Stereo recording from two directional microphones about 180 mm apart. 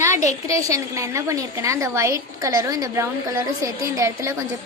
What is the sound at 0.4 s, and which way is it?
A woman's voice, 15° right (ahead or behind).